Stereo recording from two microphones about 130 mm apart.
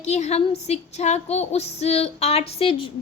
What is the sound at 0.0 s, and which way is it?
A woman's voice, 55° left (ahead or behind).